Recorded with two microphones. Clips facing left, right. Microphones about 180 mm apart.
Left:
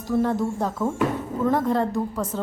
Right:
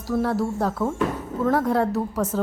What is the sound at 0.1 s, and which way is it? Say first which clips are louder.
A woman's voice: left 1 dB; 5° right (ahead or behind).